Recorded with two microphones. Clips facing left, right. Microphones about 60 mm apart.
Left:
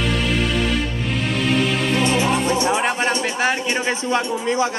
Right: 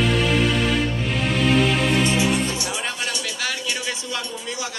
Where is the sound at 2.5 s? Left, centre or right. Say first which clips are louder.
Left 9 dB; left.